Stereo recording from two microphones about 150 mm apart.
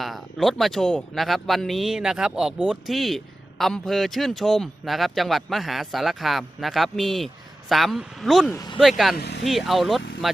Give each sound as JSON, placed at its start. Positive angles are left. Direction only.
{"t": 0.0, "sound": "speech", "side_deg": 0}
{"t": 8.5, "sound": "speech", "side_deg": 25}
{"t": 8.8, "sound": "speech", "side_deg": 0}
{"t": 9.1, "sound": "speech", "side_deg": 90}
{"t": 9.4, "sound": "speech", "side_deg": 0}